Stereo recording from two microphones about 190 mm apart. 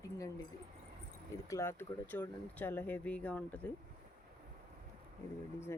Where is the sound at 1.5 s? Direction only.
15° left (ahead or behind).